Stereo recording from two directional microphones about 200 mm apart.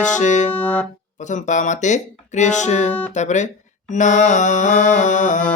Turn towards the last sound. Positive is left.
turn(degrees=40)  # may be behind; listen again after turning